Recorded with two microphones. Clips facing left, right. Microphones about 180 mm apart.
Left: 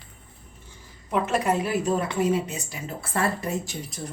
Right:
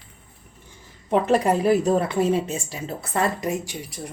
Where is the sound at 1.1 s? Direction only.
35° right (ahead or behind).